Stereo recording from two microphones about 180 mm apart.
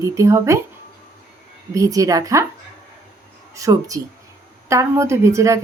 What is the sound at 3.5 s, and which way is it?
A woman's voice, 20° right (ahead or behind).